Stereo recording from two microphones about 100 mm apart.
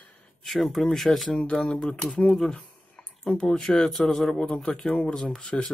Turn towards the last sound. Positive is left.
turn(degrees=10)  # may be behind; listen again after turning